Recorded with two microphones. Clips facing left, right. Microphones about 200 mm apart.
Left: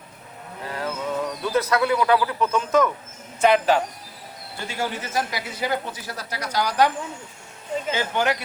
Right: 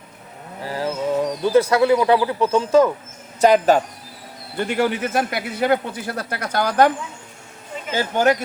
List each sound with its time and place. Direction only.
0.6 s a sound: 30° right (ahead or behind)
1.3 s speech: 30° right (ahead or behind)
3.4 s speech: 40° right (ahead or behind)
4.5 s a man's voice: 60° right (ahead or behind)
7.9 s speech: 45° right (ahead or behind)